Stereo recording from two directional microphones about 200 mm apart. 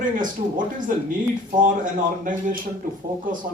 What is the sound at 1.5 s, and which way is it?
Speech, 40° right (ahead or behind).